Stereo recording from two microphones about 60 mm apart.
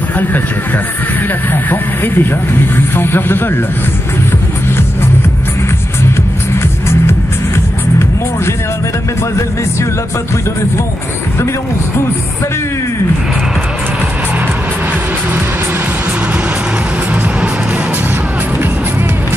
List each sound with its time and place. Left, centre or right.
1.5 s speech: left